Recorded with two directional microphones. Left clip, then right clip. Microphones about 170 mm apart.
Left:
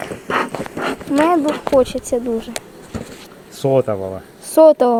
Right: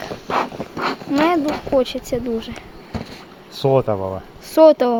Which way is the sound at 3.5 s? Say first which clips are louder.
Left 1 dB; 35° right (ahead or behind).